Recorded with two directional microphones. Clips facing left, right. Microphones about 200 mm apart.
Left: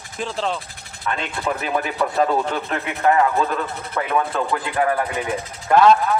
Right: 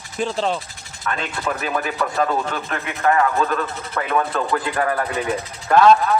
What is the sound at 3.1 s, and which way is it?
Speech, 15° left (ahead or behind).